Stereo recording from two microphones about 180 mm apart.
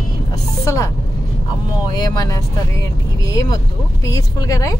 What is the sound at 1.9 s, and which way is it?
Speech, 20° left (ahead or behind).